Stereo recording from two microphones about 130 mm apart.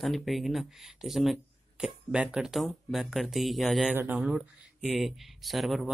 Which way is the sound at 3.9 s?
15° right (ahead or behind).